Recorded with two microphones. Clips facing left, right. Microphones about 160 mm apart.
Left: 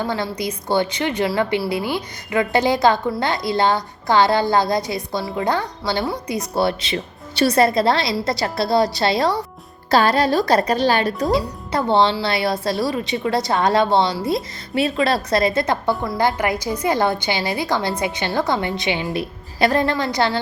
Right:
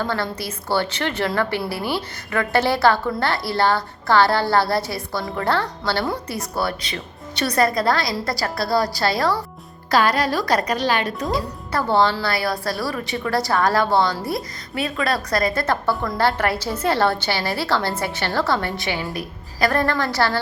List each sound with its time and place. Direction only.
0.0 s a woman's voice: 15° left (ahead or behind); by 11.3 s 35° left (ahead or behind)
11.3 s a woman's voice: 20° left (ahead or behind)